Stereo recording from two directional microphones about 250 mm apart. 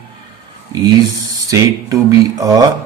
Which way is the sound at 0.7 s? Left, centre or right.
Centre.